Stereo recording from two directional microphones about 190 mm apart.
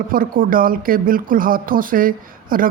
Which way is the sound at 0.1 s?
50° right (ahead or behind).